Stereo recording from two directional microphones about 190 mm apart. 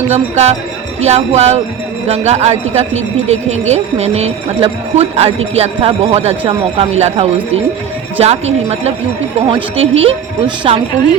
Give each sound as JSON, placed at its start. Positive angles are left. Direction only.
{"t": 0.1, "sound": "a woman's voice", "side_deg": -35}